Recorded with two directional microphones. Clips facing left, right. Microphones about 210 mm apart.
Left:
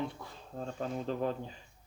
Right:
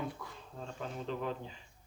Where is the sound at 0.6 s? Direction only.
40° left (ahead or behind).